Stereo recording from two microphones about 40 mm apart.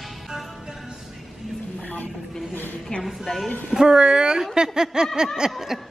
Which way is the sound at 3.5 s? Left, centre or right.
Left.